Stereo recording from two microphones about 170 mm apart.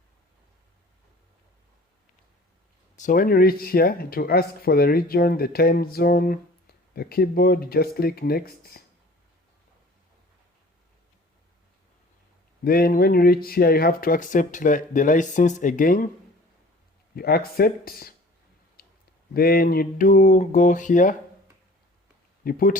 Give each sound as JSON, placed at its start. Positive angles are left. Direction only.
{"t": 3.0, "sound": "speech", "side_deg": 55}
{"t": 12.6, "sound": "speech", "side_deg": 60}
{"t": 17.2, "sound": "speech", "side_deg": 65}
{"t": 18.8, "sound": "clicking", "side_deg": 60}
{"t": 19.3, "sound": "speech", "side_deg": 60}
{"t": 22.4, "sound": "speech", "side_deg": 55}